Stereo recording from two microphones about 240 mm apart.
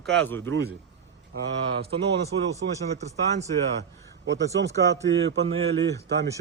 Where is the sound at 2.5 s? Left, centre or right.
Right.